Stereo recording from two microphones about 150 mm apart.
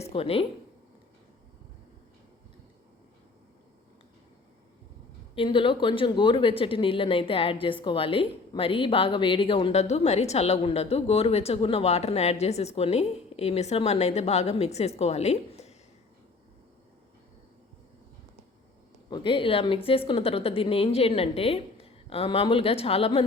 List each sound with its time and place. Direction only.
0.0 s speech: 40° left (ahead or behind)
5.3 s speech: 35° left (ahead or behind)
9.8 s a woman's voice: 45° left (ahead or behind)
19.1 s speech: 35° left (ahead or behind)